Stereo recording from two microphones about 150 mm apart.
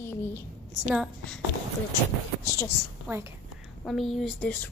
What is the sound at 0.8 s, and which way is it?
Speech, centre (ahead or behind).